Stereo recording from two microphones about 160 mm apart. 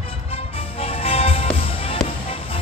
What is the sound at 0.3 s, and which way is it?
Music, 35° left (ahead or behind).